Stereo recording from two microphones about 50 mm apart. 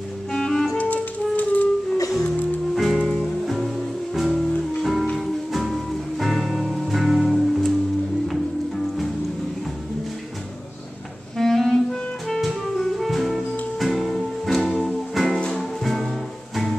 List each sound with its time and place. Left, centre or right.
0.3 s music: centre
0.7 s music: left
2.7 s music: centre
11.3 s clarinet: centre
12.4 s music: centre